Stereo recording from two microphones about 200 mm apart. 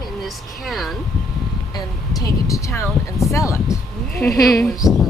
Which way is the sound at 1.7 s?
15° left (ahead or behind).